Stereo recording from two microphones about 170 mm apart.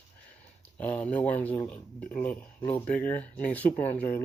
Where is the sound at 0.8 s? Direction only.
10° left (ahead or behind).